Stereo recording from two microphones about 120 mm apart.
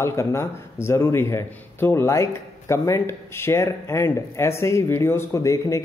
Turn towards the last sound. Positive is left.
turn(degrees=25)  # may be behind; listen again after turning